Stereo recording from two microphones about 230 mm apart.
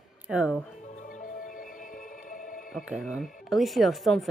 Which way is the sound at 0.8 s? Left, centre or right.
Left.